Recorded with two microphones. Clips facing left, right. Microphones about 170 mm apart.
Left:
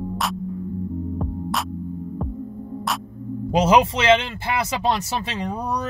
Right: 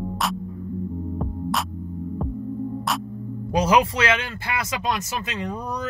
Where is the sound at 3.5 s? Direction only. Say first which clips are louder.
Left 2 dB; 25° left (ahead or behind).